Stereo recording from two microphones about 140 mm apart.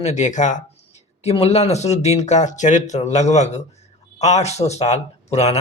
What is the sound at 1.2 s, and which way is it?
Speech, 45° left (ahead or behind).